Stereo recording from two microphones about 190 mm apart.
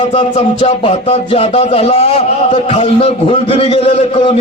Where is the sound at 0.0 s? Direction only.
30° left (ahead or behind).